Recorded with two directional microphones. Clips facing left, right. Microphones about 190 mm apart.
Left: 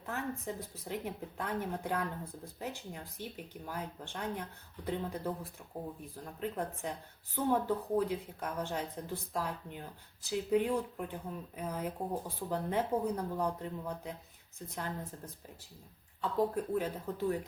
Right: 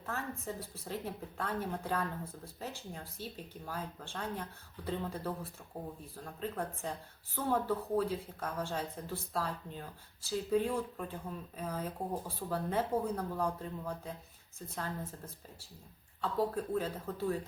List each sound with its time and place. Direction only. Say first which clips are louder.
0.0 s speech: left 2 dB; 15° left (ahead or behind)
16.2 s speech: left 1 dB; 15° left (ahead or behind)